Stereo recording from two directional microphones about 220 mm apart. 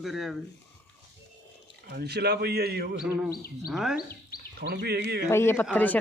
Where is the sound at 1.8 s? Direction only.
45° right (ahead or behind).